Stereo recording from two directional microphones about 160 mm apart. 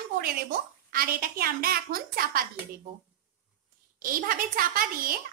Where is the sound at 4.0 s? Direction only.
60° right (ahead or behind).